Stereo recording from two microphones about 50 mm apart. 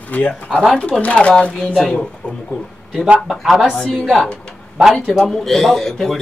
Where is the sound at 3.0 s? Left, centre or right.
Right.